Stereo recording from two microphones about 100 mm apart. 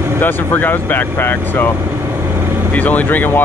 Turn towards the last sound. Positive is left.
turn(degrees=15)  # may be behind; listen again after turning